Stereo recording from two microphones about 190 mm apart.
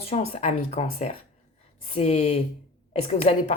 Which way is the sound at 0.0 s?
30° left (ahead or behind).